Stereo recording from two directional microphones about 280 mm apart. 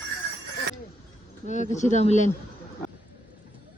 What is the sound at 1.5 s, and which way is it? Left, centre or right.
Speech, left.